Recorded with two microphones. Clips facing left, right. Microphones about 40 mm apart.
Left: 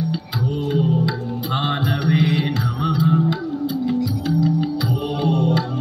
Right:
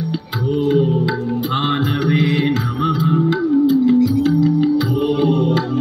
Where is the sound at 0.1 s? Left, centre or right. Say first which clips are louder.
Right 4 dB; right.